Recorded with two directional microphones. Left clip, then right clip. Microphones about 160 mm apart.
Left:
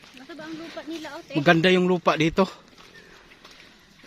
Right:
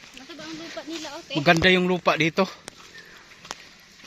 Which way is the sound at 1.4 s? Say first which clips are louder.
Even; 25° left (ahead or behind).